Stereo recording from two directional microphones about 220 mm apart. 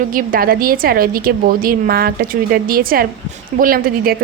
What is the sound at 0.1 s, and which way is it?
A woman's voice, 40° right (ahead or behind).